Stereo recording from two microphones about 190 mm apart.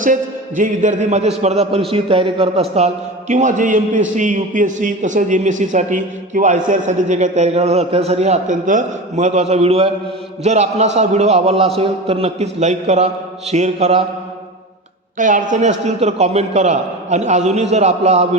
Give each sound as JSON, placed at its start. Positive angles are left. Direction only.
{"t": 0.0, "sound": "a man's voice", "side_deg": -45}
{"t": 15.2, "sound": "a man's voice", "side_deg": -45}